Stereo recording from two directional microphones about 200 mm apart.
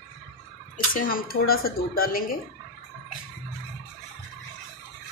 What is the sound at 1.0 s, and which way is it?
Speech, 45° left (ahead or behind).